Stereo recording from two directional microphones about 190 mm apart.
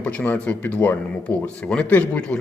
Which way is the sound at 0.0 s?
5° left (ahead or behind).